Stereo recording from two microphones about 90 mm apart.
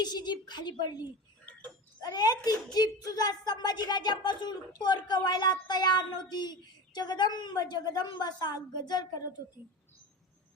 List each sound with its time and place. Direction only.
0.0 s a woman's voice: 50° left (ahead or behind)
2.0 s a woman's voice: 50° left (ahead or behind)